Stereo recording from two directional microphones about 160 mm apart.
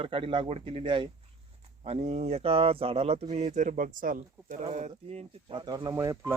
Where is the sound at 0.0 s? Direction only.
35° right (ahead or behind); by 4.6 s 60° right (ahead or behind).